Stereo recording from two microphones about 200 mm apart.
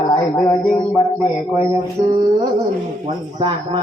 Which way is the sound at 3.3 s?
25° right (ahead or behind).